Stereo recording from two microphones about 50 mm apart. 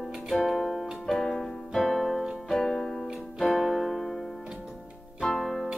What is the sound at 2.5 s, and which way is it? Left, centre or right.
Music, centre.